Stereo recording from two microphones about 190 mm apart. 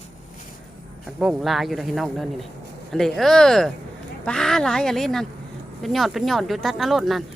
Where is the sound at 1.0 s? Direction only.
Centre (ahead or behind).